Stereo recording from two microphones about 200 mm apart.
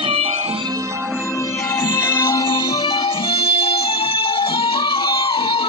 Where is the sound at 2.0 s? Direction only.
15° left (ahead or behind).